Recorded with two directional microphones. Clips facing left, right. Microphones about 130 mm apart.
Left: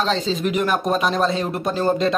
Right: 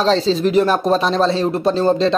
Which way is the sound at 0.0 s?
35° right (ahead or behind).